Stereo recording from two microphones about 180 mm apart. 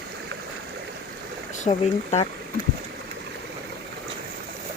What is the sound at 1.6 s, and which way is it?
Speech, 35° left (ahead or behind).